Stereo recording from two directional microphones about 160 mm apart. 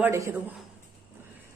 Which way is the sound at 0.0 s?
15° right (ahead or behind).